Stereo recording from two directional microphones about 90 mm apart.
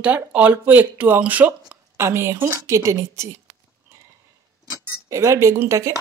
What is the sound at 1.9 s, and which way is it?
A woman's voice, 30° right (ahead or behind).